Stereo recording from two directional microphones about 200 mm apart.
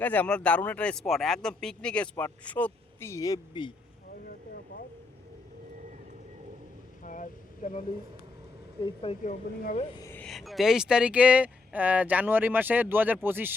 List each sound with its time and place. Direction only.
0.0 s speech: 10° left (ahead or behind)
7.0 s a sound: 40° left (ahead or behind)
8.8 s speech: 25° left (ahead or behind)
9.2 s speech: 40° left (ahead or behind)
10.0 s a sound: 10° left (ahead or behind)
10.2 s speech: centre (ahead or behind)